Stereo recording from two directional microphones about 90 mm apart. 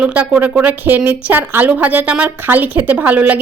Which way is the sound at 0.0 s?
15° right (ahead or behind).